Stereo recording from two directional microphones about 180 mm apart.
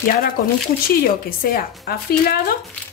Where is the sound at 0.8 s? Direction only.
55° left (ahead or behind).